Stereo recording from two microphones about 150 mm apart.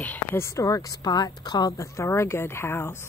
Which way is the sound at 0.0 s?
15° left (ahead or behind).